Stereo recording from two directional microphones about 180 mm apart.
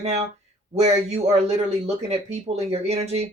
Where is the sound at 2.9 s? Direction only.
35° right (ahead or behind).